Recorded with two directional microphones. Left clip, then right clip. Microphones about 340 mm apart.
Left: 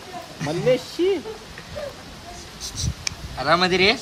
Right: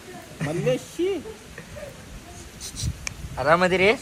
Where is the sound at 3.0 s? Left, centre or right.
Centre.